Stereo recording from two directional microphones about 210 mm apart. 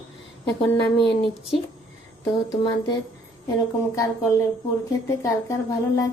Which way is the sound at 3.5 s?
15° left (ahead or behind).